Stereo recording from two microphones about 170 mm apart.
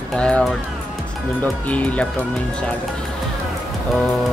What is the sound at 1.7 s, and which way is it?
Speech, 10° left (ahead or behind).